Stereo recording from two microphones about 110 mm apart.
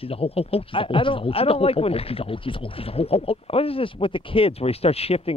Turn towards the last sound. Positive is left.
turn(degrees=65)  # may be behind; listen again after turning